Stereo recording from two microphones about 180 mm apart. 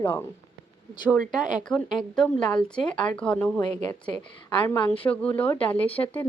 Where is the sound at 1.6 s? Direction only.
Centre (ahead or behind).